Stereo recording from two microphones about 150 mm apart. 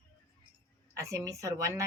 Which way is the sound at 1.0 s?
20° right (ahead or behind).